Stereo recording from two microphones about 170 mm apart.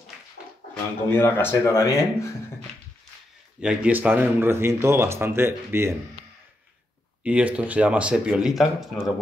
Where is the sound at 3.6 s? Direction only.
5° right (ahead or behind).